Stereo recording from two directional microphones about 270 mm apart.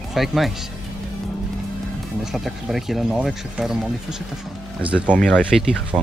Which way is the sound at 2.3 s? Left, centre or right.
Centre.